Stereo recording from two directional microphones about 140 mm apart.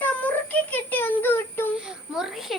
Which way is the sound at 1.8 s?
5° right (ahead or behind).